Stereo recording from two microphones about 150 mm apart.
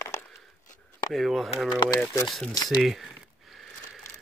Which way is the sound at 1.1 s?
Centre (ahead or behind).